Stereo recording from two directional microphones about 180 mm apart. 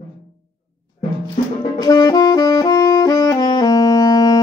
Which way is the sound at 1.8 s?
20° left (ahead or behind).